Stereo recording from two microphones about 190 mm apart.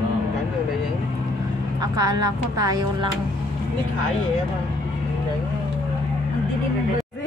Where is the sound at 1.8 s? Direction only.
20° right (ahead or behind).